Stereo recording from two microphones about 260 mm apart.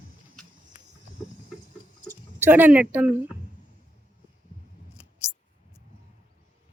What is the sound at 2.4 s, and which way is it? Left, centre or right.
Speech, centre.